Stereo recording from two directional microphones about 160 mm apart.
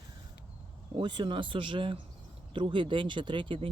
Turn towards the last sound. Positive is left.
turn(degrees=-30)  # may be behind; listen again after turning